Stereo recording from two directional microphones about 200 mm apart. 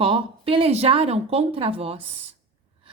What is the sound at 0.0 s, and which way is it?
Speech, 25° right (ahead or behind).